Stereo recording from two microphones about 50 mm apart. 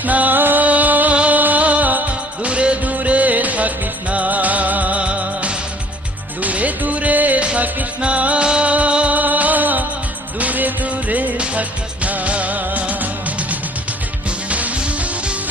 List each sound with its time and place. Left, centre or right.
0.0 s music: right
14.3 s music: right